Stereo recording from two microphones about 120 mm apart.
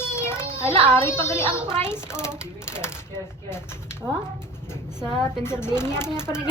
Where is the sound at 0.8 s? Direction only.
20° left (ahead or behind).